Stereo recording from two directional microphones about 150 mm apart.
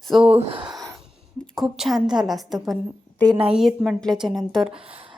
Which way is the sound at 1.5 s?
5° right (ahead or behind).